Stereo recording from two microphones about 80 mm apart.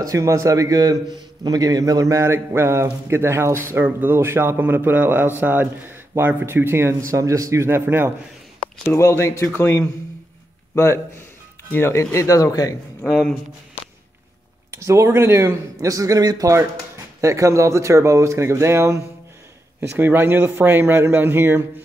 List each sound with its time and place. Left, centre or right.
0.0 s a man's voice: right
2.2 s speech: right
8.8 s a man's voice: left
13.0 s speech: centre
14.7 s speech: right
17.2 s speech: right
20.0 s speech: right